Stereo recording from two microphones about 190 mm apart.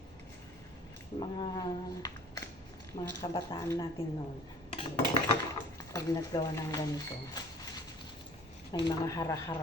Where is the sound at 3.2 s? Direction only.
20° left (ahead or behind).